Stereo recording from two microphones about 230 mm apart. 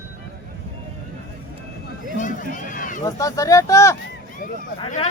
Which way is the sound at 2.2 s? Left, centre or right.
Left.